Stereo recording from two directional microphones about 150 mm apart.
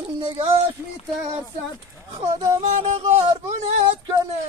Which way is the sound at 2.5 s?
45° right (ahead or behind).